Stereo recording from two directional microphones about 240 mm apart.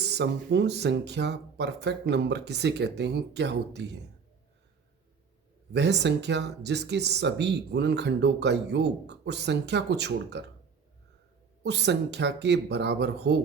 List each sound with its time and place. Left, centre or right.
0.0 s speech: right
5.7 s speech: right
11.6 s speech: right